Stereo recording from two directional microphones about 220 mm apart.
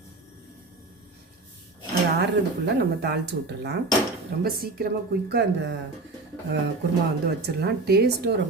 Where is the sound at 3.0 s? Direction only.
50° right (ahead or behind).